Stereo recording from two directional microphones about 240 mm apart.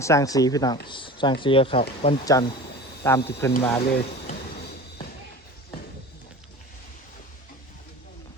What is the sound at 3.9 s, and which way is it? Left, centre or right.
Music, left.